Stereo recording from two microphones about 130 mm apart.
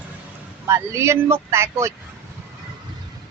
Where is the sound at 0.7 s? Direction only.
20° right (ahead or behind).